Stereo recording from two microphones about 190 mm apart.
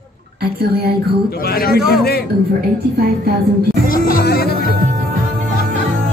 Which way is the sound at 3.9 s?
50° left (ahead or behind).